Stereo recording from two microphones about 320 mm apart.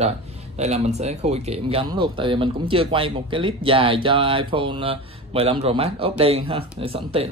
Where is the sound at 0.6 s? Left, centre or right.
Right.